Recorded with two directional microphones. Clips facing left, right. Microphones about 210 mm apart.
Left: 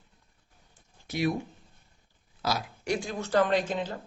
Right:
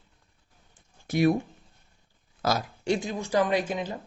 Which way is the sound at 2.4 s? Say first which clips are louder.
Right 4 dB; 45° right (ahead or behind).